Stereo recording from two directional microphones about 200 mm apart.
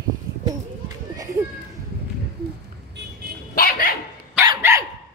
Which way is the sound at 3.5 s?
45° left (ahead or behind).